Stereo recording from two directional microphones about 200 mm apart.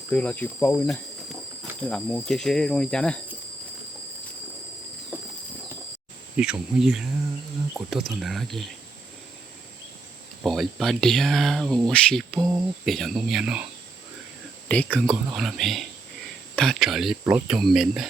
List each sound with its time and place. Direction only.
0.1 s speech: 5° left (ahead or behind)
6.3 s speech: 5° right (ahead or behind)
10.4 s speech: centre (ahead or behind)
12.4 s speech: 20° right (ahead or behind)
12.8 s speech: centre (ahead or behind)
14.7 s speech: 5° left (ahead or behind); by 17.6 s 10° right (ahead or behind)
17.6 s speech: centre (ahead or behind)